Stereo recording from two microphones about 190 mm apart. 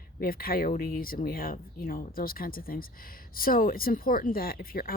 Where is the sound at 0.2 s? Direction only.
50° left (ahead or behind).